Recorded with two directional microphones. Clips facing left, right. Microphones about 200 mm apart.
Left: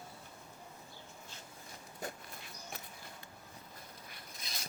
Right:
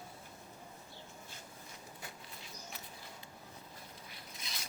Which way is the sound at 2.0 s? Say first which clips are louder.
Left 6 dB; 45° left (ahead or behind).